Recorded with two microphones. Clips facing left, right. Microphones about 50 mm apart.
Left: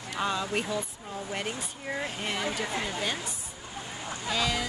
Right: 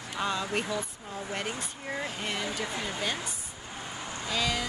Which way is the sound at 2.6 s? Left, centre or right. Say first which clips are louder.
Left 2 dB; left.